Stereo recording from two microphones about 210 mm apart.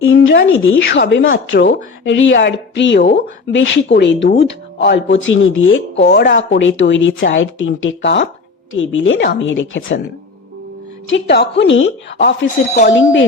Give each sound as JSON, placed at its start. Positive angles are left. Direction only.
{"t": 0.0, "sound": "speech", "side_deg": 60}
{"t": 11.0, "sound": "speech", "side_deg": 60}